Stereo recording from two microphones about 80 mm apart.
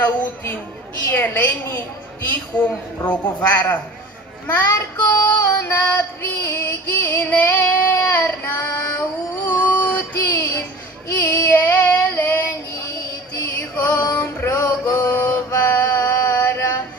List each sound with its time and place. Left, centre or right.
0.0 s child singing: left
13.6 s music: left
14.1 s male singing: left
16.1 s mantra: left